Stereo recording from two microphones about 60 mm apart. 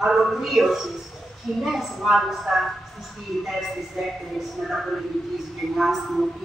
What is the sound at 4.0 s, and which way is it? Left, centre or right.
Speech, centre.